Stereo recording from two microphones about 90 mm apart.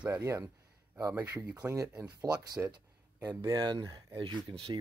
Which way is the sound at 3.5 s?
50° right (ahead or behind).